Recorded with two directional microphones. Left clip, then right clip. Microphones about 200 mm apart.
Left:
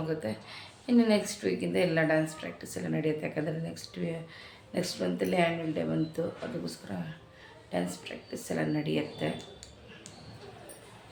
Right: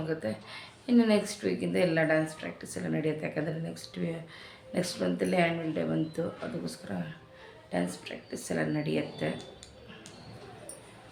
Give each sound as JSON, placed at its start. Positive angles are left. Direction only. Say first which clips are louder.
{"t": 0.0, "sound": "speech", "louder": "even", "side_deg": -5}